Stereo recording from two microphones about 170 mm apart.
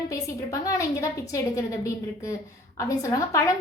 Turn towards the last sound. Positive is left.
turn(degrees=20)  # may be behind; listen again after turning